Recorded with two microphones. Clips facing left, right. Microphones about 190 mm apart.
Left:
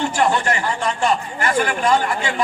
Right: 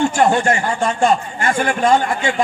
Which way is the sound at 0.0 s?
45° right (ahead or behind).